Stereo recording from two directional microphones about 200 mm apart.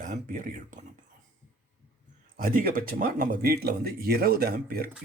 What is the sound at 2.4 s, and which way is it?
Speech, 45° right (ahead or behind).